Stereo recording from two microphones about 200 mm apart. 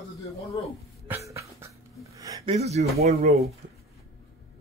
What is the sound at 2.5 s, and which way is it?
Speech, 30° right (ahead or behind).